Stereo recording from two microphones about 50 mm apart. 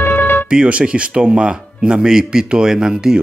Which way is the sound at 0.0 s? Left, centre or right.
Left.